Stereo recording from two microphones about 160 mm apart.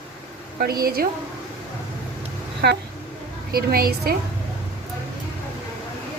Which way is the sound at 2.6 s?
85° right.